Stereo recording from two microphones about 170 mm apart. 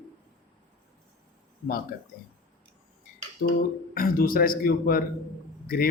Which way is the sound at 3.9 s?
60° left (ahead or behind).